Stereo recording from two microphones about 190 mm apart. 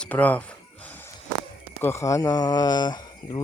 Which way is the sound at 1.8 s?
15° left (ahead or behind).